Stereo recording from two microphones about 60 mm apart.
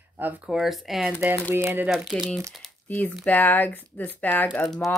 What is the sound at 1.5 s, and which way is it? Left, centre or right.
Speech, right.